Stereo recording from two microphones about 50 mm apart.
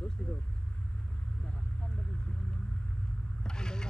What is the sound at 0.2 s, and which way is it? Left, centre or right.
Vehicle, left.